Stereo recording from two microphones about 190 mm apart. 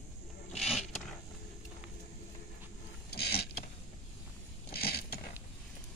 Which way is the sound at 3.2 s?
55° left (ahead or behind).